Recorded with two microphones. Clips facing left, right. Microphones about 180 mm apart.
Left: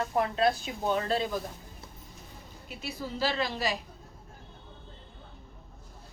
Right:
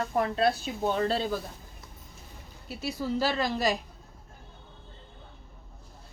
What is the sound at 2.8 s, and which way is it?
A woman's voice, 45° right (ahead or behind).